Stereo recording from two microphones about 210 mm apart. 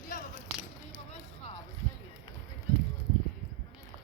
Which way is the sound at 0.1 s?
40° left (ahead or behind).